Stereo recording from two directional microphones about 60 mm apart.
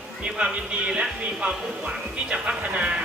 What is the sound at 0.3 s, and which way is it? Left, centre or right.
Speech, centre.